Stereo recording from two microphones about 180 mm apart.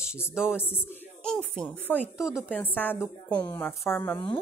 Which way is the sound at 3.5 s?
10° left (ahead or behind).